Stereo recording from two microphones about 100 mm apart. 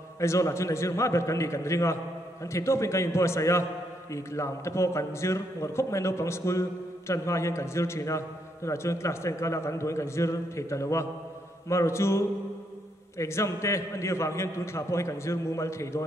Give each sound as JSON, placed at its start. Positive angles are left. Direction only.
{"t": 0.2, "sound": "a man's voice", "side_deg": 30}